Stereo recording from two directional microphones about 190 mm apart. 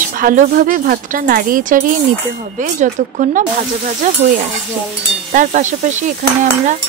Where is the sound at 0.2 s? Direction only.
45° right (ahead or behind).